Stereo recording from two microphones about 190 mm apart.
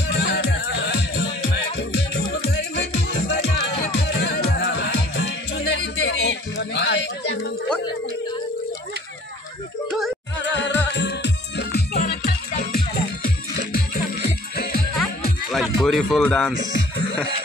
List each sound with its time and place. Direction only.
0.2 s music: 70° left (ahead or behind)
1.8 s music: 65° left (ahead or behind)
9.8 s music: centre (ahead or behind)
10.4 s music: 70° left (ahead or behind)
15.5 s music: centre (ahead or behind)